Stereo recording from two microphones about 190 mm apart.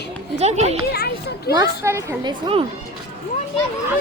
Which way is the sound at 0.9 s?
55° left (ahead or behind).